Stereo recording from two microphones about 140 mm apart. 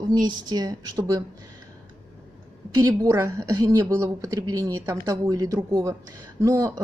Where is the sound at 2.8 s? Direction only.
20° right (ahead or behind).